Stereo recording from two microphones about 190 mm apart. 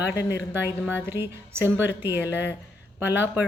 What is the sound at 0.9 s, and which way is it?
A woman's voice, 10° right (ahead or behind).